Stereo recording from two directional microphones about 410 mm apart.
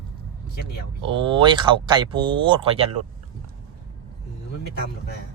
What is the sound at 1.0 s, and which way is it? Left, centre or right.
Speech, centre.